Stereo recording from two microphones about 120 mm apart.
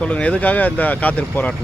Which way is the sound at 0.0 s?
10° left (ahead or behind).